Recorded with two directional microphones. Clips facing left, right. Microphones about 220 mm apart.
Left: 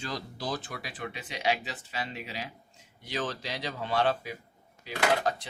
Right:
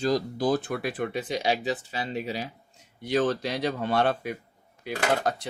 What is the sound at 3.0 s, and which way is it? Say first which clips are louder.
Speech: right 9 dB; 55° right (ahead or behind).